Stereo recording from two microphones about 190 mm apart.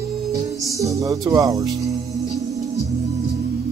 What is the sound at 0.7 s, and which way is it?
Music, 15° right (ahead or behind).